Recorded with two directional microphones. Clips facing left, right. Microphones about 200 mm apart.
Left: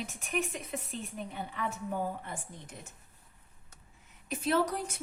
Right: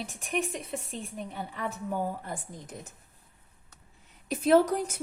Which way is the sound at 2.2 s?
35° right (ahead or behind).